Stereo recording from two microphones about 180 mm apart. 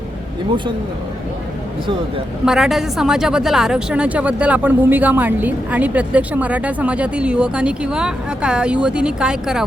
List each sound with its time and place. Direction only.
2.4 s a woman's voice: 5° right (ahead or behind)